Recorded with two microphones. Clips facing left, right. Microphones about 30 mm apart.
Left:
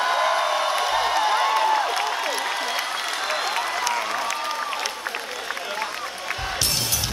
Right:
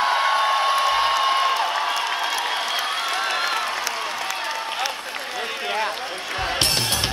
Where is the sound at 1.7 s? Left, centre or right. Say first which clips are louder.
Left 1 dB; right.